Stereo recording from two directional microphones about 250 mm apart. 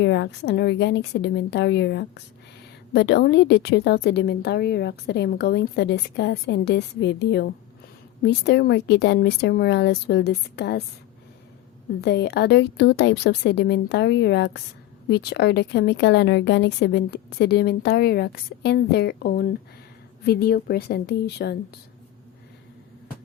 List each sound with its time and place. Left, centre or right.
0.0 s a woman's voice: left
12.0 s a woman's voice: left